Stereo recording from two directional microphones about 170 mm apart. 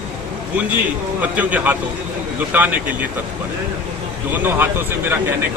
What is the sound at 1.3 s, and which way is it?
Speech, 10° right (ahead or behind).